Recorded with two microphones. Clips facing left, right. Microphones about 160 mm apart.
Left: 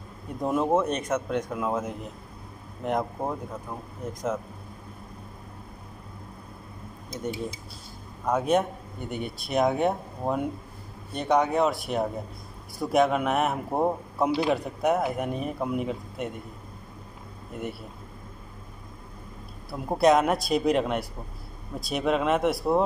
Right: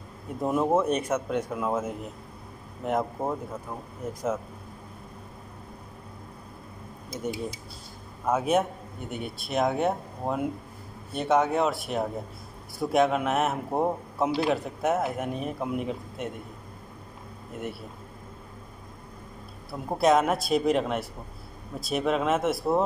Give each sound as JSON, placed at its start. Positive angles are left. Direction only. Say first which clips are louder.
{"t": 0.4, "sound": "a man's voice", "louder": "even", "side_deg": -5}
{"t": 8.3, "sound": "speech", "louder": "left 1 dB", "side_deg": -5}
{"t": 19.7, "sound": "speech", "louder": "left 1 dB", "side_deg": 0}